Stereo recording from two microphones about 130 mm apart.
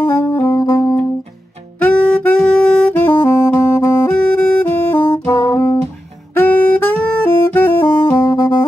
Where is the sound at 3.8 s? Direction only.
15° left (ahead or behind).